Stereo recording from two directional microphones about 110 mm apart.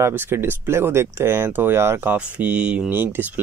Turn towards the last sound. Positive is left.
turn(degrees=-20)  # may be behind; listen again after turning